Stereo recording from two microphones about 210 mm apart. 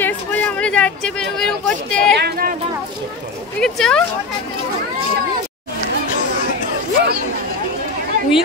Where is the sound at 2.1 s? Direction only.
45° right (ahead or behind).